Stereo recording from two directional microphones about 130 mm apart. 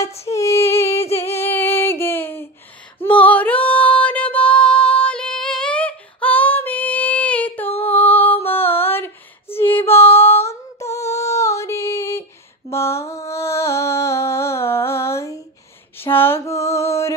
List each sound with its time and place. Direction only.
0.0 s female singing: 50° left (ahead or behind)
0.3 s female singing: 25° left (ahead or behind)
13.3 s music: 20° left (ahead or behind)
16.0 s mantra: 15° left (ahead or behind)